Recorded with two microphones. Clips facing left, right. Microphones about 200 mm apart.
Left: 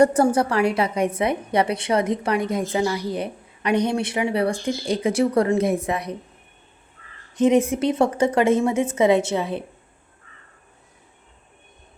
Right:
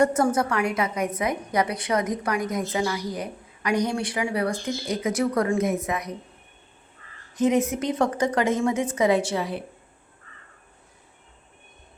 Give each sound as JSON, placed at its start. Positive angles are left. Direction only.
{"t": 0.0, "sound": "a woman's voice", "side_deg": 30}
{"t": 7.4, "sound": "a woman's voice", "side_deg": 30}